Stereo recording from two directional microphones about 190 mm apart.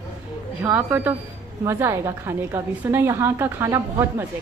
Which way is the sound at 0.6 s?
10° right (ahead or behind).